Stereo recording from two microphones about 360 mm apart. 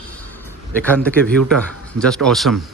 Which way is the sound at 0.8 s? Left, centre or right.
Centre.